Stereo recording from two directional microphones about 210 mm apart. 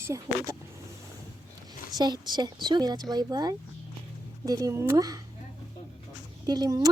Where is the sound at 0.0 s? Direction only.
15° right (ahead or behind).